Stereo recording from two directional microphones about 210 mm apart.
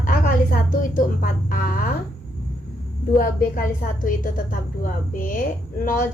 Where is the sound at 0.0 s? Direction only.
45° left (ahead or behind).